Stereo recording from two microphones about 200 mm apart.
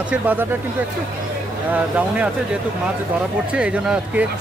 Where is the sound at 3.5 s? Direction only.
5° right (ahead or behind).